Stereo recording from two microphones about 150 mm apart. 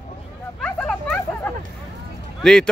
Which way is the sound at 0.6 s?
10° left (ahead or behind).